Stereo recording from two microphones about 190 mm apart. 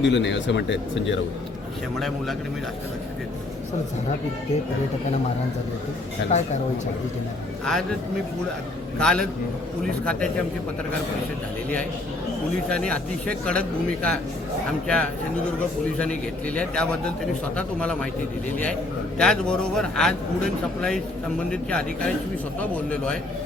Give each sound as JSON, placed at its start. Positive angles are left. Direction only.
{"t": 0.0, "sound": "speech", "side_deg": 70}
{"t": 2.0, "sound": "a man's voice", "side_deg": 0}
{"t": 7.6, "sound": "a man's voice", "side_deg": 5}
{"t": 9.0, "sound": "a man's voice", "side_deg": 5}
{"t": 12.6, "sound": "a man's voice", "side_deg": 5}
{"t": 16.6, "sound": "a man's voice", "side_deg": 5}
{"t": 19.2, "sound": "a man's voice", "side_deg": 5}